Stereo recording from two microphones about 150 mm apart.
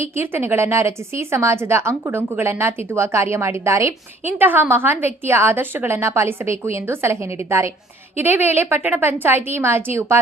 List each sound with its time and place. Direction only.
0.0 s a woman's voice: 15° right (ahead or behind)